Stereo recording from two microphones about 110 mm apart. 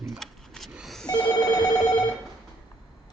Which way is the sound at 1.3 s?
35° left (ahead or behind).